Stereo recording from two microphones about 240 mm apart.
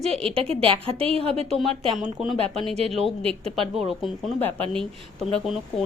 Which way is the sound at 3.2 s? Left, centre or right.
Right.